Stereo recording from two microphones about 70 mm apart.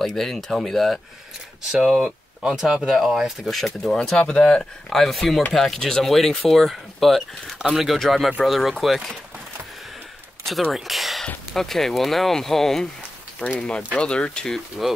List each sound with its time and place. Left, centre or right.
0.0 s speech: centre
4.2 s speech: centre
10.7 s speech: centre
13.4 s speech: centre